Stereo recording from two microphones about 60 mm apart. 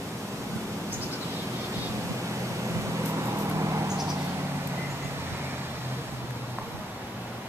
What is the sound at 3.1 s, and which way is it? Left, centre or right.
Vehicle, right.